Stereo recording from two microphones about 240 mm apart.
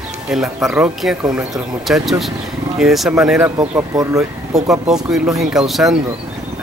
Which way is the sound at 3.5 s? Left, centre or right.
Centre.